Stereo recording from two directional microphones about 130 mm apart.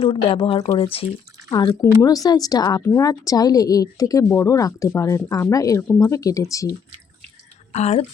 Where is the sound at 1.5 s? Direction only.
30° left (ahead or behind).